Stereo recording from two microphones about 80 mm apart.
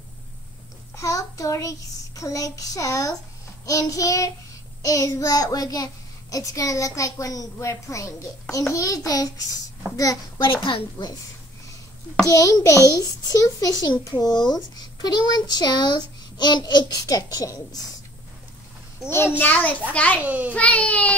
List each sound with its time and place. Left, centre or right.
0.9 s a child's voice: left
10.4 s a woman's voice: left
12.3 s a child's voice: left
17.0 s a child's voice: left
19.0 s a child's voice: left
20.2 s a child's voice: centre
20.5 s speech: centre